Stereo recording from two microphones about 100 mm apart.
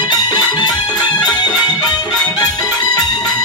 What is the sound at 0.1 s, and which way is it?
Music, 45° left (ahead or behind).